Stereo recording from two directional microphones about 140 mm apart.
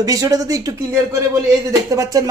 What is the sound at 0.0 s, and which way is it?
A man's voice, 25° right (ahead or behind).